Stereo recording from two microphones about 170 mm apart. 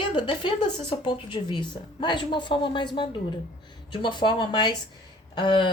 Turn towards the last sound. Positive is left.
turn(degrees=30)  # may be behind; listen again after turning